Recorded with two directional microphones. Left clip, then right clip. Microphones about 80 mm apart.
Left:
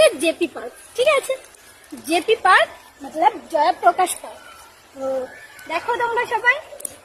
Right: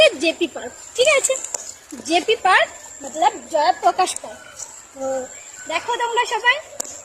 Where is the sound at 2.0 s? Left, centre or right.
Left.